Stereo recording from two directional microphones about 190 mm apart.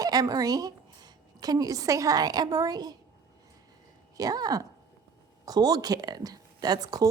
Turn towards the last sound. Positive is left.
turn(degrees=-20)  # may be behind; listen again after turning